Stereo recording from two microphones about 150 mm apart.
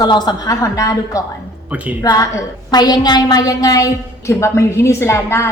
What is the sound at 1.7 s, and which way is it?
Speech, 10° right (ahead or behind).